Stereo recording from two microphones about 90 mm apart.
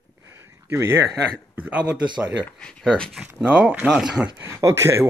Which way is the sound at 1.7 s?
15° right (ahead or behind).